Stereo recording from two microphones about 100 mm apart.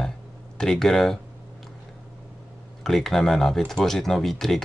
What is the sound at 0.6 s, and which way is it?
Speech, 5° left (ahead or behind).